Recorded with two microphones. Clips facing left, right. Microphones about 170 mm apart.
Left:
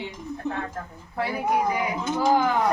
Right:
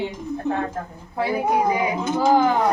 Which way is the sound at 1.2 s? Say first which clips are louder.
Right 4 dB; 25° right (ahead or behind).